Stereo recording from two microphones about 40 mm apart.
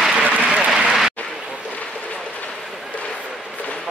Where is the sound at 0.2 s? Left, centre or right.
Right.